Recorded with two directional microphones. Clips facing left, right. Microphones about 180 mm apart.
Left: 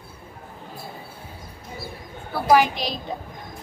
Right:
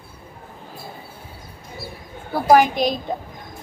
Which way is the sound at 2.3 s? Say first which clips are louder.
Right 3 dB; 45° right (ahead or behind).